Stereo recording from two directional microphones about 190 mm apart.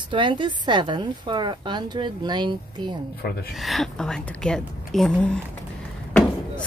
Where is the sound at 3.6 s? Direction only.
Centre (ahead or behind).